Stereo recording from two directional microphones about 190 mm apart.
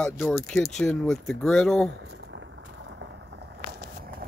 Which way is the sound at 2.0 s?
75° right (ahead or behind).